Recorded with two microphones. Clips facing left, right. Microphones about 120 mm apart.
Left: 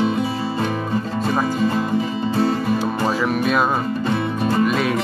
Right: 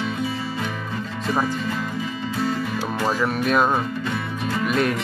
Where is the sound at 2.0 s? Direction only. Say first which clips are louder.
Left 6 dB; 35° left (ahead or behind).